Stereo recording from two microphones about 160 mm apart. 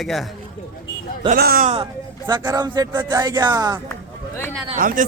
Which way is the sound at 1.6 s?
40° right (ahead or behind).